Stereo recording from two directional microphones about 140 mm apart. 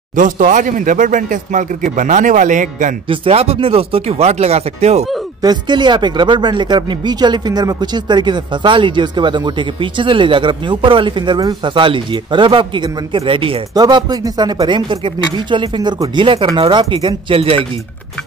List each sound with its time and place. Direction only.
0.1 s a man's voice: 70° right (ahead or behind)
3.1 s speech: 45° right (ahead or behind)
5.4 s speech: 30° right (ahead or behind)